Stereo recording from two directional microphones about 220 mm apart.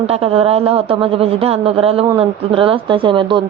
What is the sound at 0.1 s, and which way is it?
A man's voice, 25° right (ahead or behind).